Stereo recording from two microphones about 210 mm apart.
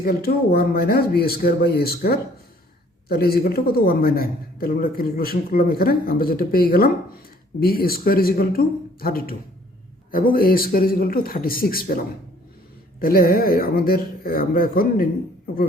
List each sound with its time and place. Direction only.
0.0 s speech: 45° left (ahead or behind)